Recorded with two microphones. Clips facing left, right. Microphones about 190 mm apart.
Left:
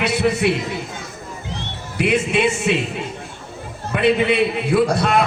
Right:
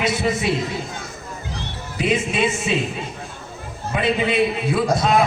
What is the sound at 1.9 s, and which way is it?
Speech, 65° left (ahead or behind).